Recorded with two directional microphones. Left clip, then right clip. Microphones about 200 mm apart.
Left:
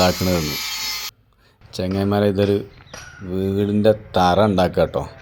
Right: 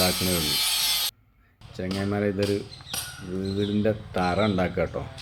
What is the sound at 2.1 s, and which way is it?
Speech, 35° left (ahead or behind).